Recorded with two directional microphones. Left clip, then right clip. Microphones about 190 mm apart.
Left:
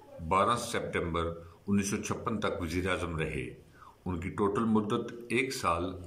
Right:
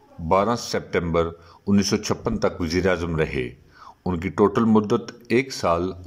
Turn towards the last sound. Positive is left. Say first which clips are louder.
# right 8 dB
turn(degrees=-40)  # may be behind; listen again after turning